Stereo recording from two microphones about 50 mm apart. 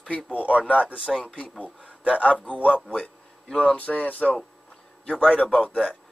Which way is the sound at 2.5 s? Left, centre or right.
Left.